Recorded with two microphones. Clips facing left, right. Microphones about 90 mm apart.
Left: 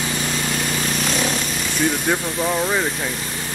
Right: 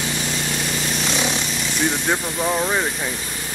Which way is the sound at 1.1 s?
20° right (ahead or behind).